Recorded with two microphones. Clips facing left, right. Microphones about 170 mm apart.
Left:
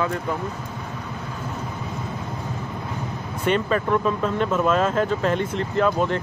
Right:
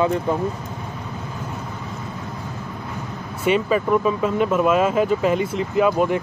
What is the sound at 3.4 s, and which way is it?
Speech, 5° right (ahead or behind).